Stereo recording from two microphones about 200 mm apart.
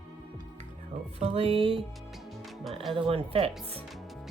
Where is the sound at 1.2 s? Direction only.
30° right (ahead or behind).